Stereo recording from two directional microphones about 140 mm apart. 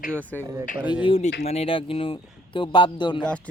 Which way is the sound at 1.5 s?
45° left (ahead or behind).